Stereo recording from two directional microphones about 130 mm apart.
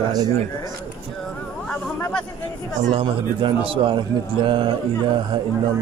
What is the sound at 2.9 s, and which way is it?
Speech, 40° right (ahead or behind).